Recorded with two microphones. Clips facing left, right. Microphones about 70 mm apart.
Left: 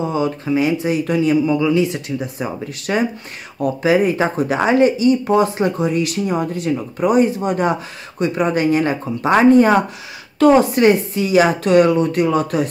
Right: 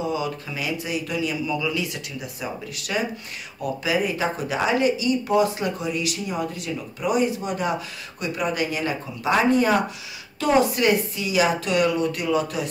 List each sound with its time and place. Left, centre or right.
0.0 s speech: left